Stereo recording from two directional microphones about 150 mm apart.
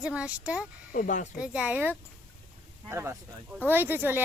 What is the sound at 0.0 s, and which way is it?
Speech, 10° right (ahead or behind).